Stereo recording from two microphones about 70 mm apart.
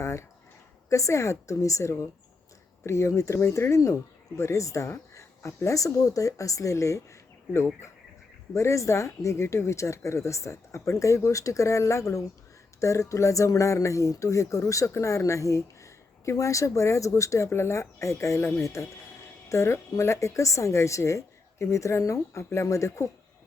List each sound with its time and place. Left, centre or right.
0.0 s a sound: left
0.9 s speech: left
18.3 s speech: left
18.6 s speech: left